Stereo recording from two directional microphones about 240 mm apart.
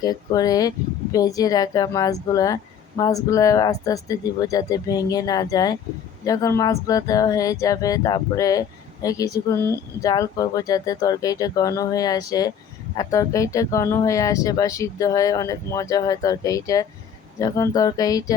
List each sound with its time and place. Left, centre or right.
0.0 s speech: centre